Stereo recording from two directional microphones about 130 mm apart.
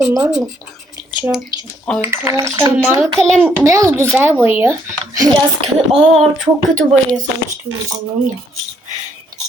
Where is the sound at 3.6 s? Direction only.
25° right (ahead or behind).